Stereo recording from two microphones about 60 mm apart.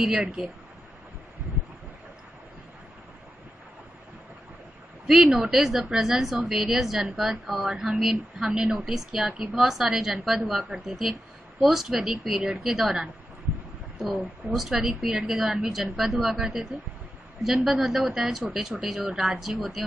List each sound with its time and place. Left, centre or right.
0.0 s a woman's voice: centre
5.0 s a woman's voice: centre
9.3 s a woman's voice: right
9.6 s a woman's voice: centre